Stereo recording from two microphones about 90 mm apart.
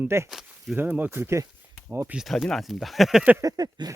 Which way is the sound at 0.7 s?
20° right (ahead or behind).